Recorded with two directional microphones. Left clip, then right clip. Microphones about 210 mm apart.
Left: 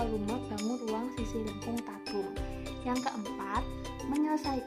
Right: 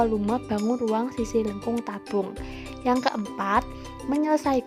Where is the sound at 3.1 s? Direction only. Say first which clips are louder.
Right 10 dB; 45° right (ahead or behind).